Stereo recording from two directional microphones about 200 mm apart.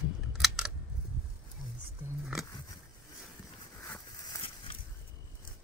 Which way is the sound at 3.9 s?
15° left (ahead or behind).